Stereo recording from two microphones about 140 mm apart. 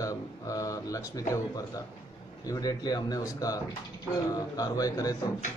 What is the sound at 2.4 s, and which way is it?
Speech, 25° left (ahead or behind).